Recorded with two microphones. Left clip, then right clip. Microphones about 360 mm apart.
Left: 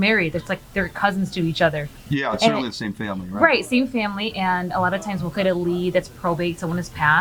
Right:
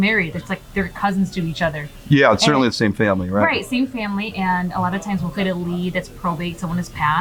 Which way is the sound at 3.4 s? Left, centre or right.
Left.